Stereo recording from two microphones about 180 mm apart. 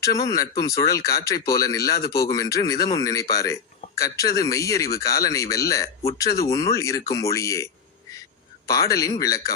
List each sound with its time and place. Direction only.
0.0 s a man's voice: 20° left (ahead or behind)
2.0 s speech: 60° left (ahead or behind)
2.2 s a man's voice: 20° left (ahead or behind)